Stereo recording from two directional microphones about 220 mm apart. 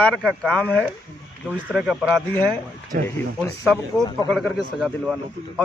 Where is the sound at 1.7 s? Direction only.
5° right (ahead or behind).